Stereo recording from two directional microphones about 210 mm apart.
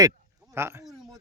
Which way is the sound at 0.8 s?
Centre (ahead or behind).